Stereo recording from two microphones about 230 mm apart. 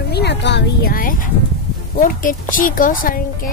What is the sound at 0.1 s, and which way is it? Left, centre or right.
A woman's voice, left.